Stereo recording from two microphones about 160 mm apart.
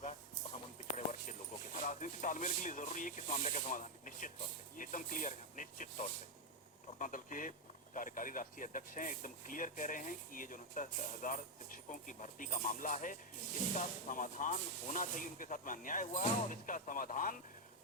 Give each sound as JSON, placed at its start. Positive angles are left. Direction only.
{"t": 0.9, "sound": "music", "side_deg": 50}
{"t": 4.8, "sound": "speech", "side_deg": 55}